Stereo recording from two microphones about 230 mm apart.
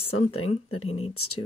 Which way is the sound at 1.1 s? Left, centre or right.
Left.